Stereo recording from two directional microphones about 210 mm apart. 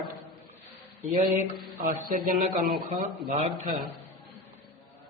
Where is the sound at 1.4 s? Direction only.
40° right (ahead or behind).